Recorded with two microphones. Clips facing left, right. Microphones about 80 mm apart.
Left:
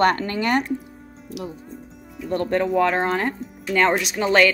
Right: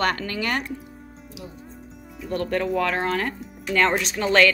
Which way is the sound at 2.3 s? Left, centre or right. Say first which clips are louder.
Left 3 dB; left.